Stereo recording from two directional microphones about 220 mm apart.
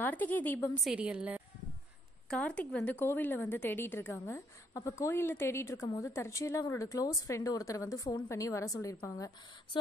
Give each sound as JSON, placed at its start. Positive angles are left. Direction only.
{"t": 0.0, "sound": "a woman's voice", "side_deg": 10}
{"t": 0.9, "sound": "a woman's voice", "side_deg": -5}